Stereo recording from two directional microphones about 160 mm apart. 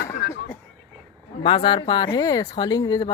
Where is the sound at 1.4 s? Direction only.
35° left (ahead or behind).